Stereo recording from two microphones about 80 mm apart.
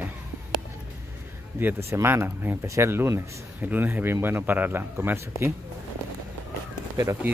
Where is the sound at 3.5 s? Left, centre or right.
Right.